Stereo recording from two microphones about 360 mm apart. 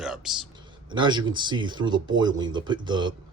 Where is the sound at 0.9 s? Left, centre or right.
Centre.